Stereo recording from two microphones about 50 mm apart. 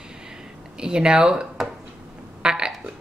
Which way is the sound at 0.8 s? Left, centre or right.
Centre.